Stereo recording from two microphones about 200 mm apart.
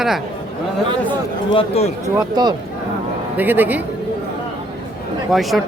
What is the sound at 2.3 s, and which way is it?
Speech, 20° right (ahead or behind).